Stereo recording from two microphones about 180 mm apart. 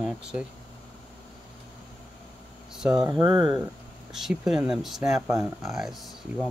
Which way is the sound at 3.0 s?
20° right (ahead or behind).